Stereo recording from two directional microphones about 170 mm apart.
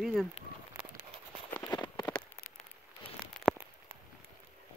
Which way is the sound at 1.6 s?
25° left (ahead or behind).